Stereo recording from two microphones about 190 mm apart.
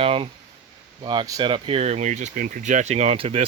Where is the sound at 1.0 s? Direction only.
20° right (ahead or behind).